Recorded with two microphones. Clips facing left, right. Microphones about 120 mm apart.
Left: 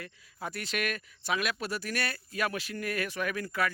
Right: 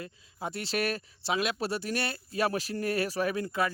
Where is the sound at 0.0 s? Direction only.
25° right (ahead or behind).